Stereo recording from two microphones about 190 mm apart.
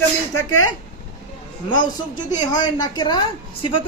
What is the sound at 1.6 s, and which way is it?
A woman's voice, 25° left (ahead or behind).